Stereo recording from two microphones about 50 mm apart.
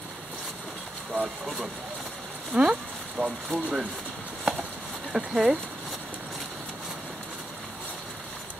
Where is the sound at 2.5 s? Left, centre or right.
Centre.